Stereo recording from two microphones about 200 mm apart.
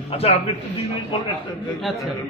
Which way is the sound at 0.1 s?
30° left (ahead or behind).